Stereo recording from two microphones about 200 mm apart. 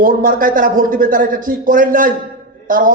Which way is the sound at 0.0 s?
45° right (ahead or behind).